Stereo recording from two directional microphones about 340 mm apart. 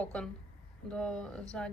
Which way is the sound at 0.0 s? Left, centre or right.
Centre.